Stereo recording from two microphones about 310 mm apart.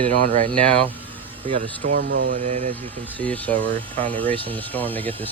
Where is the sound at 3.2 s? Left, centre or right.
Centre.